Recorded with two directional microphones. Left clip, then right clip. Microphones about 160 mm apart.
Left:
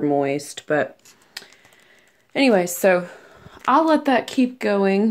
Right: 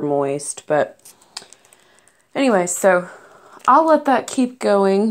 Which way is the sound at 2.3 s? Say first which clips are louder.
Right 1 dB; 15° left (ahead or behind).